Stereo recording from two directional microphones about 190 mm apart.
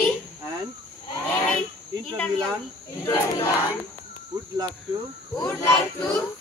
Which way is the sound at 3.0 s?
15° left (ahead or behind).